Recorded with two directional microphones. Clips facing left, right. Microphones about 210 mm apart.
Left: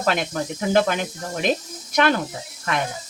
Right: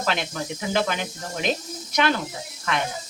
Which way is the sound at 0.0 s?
45° left (ahead or behind).